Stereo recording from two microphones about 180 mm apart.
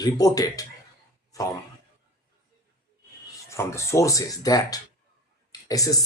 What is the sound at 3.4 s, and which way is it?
Speech, 15° left (ahead or behind).